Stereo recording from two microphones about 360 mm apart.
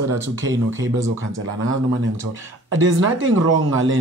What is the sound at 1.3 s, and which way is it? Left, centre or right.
Speech, right.